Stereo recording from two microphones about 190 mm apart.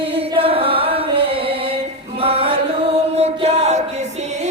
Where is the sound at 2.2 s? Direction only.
30° right (ahead or behind).